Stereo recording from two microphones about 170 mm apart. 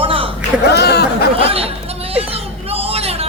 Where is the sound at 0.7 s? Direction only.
75° left (ahead or behind).